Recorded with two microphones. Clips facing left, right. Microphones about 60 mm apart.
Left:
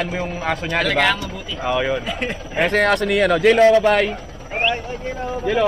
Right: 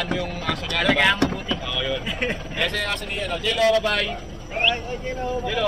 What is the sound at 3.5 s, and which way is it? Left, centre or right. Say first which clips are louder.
Speech: left 2 dB; left.